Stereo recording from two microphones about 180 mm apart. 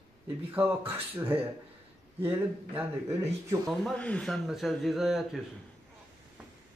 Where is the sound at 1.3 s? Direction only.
10° right (ahead or behind).